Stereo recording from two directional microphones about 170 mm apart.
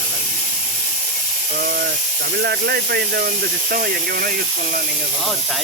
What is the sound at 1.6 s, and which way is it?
Speech, 60° right (ahead or behind).